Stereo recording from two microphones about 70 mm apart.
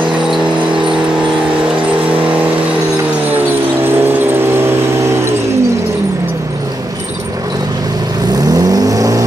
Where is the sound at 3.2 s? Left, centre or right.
Right.